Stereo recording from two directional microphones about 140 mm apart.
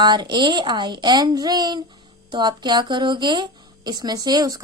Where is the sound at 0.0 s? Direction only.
30° right (ahead or behind).